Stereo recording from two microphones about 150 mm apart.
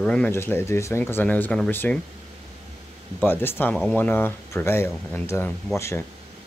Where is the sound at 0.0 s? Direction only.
5° left (ahead or behind).